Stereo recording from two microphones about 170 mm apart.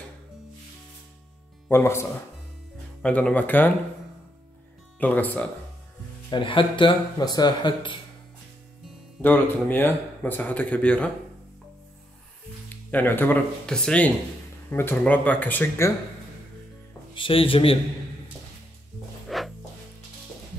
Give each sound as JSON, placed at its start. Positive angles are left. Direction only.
{"t": 1.7, "sound": "speech", "side_deg": 15}
{"t": 5.0, "sound": "speech", "side_deg": 10}
{"t": 6.3, "sound": "speech", "side_deg": 30}
{"t": 9.2, "sound": "speech", "side_deg": 10}
{"t": 12.9, "sound": "speech", "side_deg": 10}
{"t": 17.1, "sound": "speech", "side_deg": 30}
{"t": 19.2, "sound": "music", "side_deg": 0}